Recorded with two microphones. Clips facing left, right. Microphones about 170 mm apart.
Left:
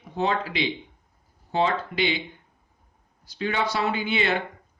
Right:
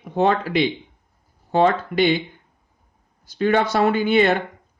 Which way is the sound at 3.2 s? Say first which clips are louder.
Right 8 dB; 50° right (ahead or behind).